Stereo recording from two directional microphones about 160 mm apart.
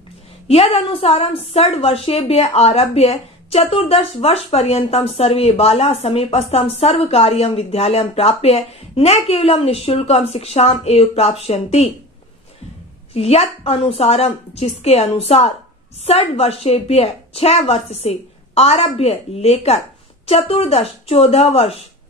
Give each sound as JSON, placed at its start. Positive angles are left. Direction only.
{"t": 0.5, "sound": "a woman's voice", "side_deg": 40}
{"t": 13.1, "sound": "a woman's voice", "side_deg": 40}